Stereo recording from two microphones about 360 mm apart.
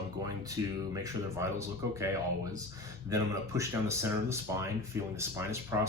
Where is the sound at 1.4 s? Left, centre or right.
Centre.